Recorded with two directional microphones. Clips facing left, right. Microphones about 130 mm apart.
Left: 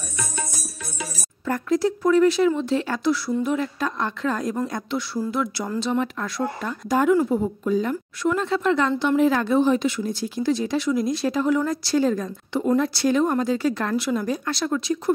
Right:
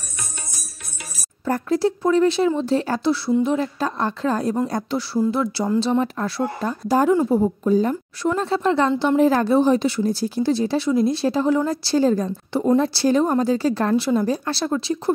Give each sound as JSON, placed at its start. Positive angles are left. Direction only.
{"t": 1.4, "sound": "speech", "side_deg": -30}